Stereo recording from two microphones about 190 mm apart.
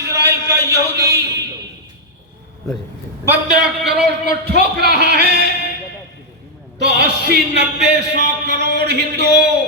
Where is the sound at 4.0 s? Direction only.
60° right (ahead or behind).